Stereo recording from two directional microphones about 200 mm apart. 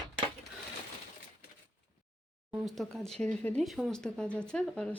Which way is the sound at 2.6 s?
Centre (ahead or behind).